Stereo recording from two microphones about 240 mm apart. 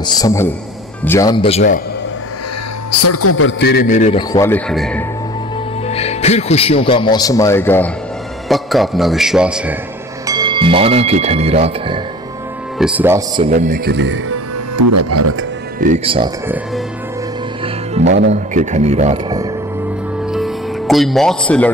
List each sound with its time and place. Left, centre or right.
0.0 s a man's voice: centre
3.0 s a man's voice: left
4.3 s a man's voice: centre
5.9 s a man's voice: left; by 9.8 s centre
10.2 s speech: centre
12.7 s speech: centre
13.5 s speech: right
14.3 s speech: right
15.8 s speech: right
18.0 s speech: right
18.3 s speech: right
20.3 s music: centre